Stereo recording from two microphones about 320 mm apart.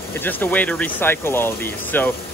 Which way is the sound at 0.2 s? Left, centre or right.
Centre.